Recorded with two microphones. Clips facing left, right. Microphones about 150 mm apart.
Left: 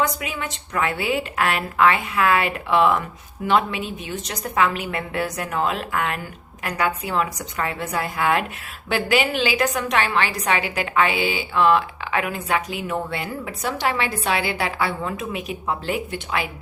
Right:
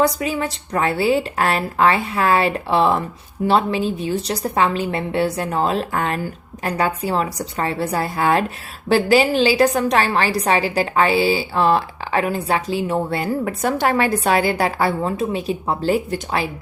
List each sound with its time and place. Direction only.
0.0 s a woman's voice: 35° right (ahead or behind)